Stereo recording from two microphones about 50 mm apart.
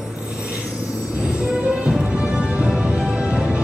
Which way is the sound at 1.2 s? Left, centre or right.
Centre.